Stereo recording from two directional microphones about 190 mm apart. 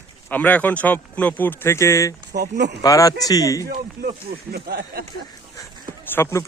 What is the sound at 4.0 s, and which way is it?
Speech, 55° right (ahead or behind).